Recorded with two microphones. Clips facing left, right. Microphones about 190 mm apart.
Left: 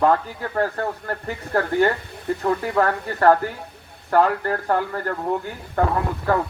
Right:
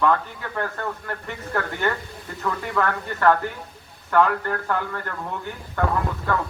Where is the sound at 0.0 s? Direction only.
35° left (ahead or behind).